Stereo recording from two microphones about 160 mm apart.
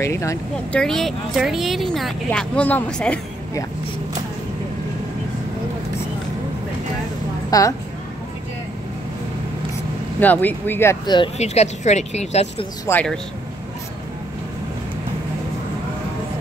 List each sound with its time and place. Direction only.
0.0 s speech: 20° left (ahead or behind)
0.7 s speech: 5° left (ahead or behind)
7.5 s a woman's voice: 20° left (ahead or behind)
10.2 s speech: 10° left (ahead or behind)
11.3 s speech: 45° left (ahead or behind)
12.9 s speech: 20° left (ahead or behind)